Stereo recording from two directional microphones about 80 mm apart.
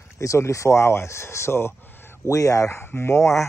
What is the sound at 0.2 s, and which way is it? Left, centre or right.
Speech, left.